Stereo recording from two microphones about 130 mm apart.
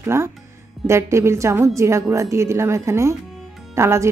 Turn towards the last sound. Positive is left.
turn(degrees=-20)  # may be behind; listen again after turning